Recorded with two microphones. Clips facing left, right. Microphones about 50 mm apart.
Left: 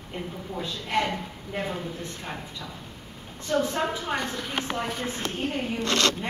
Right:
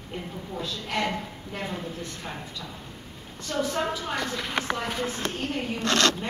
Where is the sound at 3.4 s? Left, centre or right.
Left.